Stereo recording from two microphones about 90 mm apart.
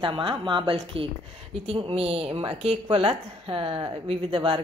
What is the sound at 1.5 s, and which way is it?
A woman's voice, 90° right.